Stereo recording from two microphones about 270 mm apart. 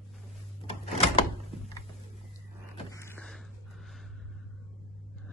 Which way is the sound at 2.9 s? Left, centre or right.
Centre.